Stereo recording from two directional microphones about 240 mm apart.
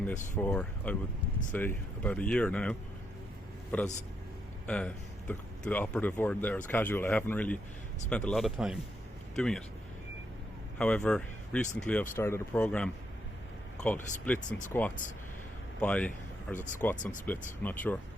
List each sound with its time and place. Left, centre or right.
0.4 s a man's voice: centre
10.8 s speech: centre
16.6 s speech: left
16.8 s speech: centre